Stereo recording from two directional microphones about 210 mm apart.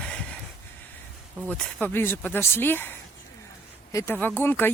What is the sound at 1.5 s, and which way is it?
Speech, 5° left (ahead or behind).